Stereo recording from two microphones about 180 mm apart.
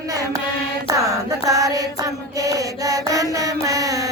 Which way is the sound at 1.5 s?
20° right (ahead or behind).